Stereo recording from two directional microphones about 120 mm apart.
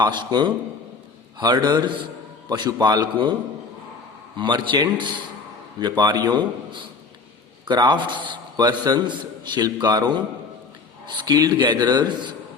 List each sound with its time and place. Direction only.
0.0 s a man's voice: 40° right (ahead or behind)
4.4 s a man's voice: 40° right (ahead or behind)